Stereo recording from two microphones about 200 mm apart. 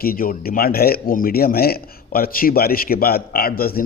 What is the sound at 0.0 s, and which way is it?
A man's voice, 45° left (ahead or behind).